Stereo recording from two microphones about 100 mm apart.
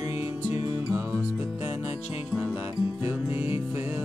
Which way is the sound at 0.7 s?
25° right (ahead or behind).